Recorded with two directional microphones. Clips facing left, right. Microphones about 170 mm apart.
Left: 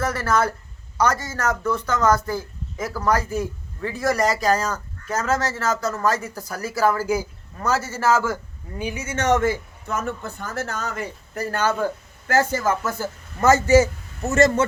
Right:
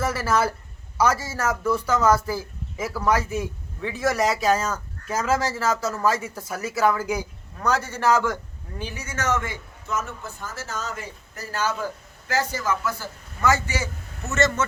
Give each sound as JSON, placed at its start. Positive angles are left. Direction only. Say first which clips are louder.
{"t": 0.0, "sound": "speech", "louder": "left 1 dB", "side_deg": -5}
{"t": 8.8, "sound": "speech", "louder": "left 6 dB", "side_deg": 15}
{"t": 9.0, "sound": "a man's voice", "louder": "left 7 dB", "side_deg": 30}
{"t": 9.8, "sound": "a man's voice", "louder": "left 2 dB", "side_deg": 55}